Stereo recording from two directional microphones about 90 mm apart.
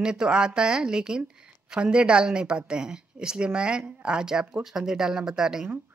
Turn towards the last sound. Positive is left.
turn(degrees=-5)  # may be behind; listen again after turning